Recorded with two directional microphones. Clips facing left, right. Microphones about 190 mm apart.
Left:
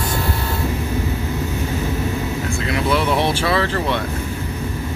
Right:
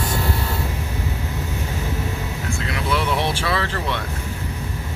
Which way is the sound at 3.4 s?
30° left (ahead or behind).